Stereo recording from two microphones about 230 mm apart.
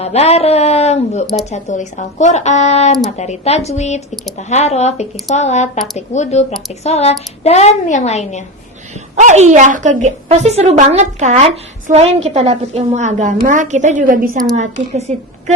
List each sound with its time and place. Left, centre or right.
0.0 s a woman's voice: left
9.1 s a woman's voice: right